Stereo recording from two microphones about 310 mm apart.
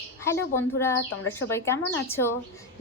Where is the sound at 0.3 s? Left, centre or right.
Centre.